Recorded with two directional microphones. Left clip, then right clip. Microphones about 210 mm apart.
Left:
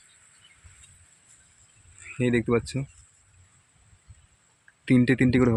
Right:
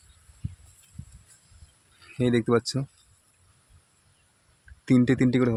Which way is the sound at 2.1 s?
Centre (ahead or behind).